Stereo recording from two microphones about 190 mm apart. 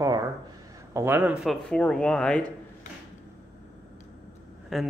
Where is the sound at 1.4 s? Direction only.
5° left (ahead or behind).